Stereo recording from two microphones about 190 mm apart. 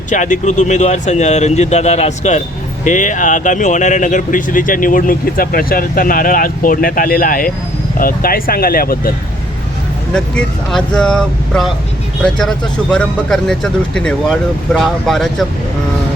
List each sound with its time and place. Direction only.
0.1 s speech: 40° left (ahead or behind)
10.2 s speech: 5° left (ahead or behind)